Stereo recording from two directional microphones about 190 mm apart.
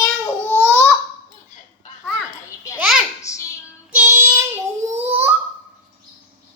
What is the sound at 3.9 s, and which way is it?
Child singing, 10° right (ahead or behind).